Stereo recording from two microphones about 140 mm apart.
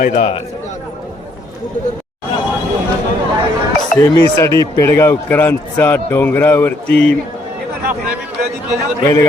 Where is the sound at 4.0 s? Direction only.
20° left (ahead or behind).